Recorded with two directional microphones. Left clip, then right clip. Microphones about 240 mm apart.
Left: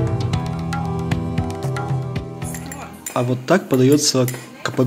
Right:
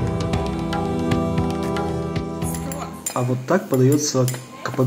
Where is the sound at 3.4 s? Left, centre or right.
Left.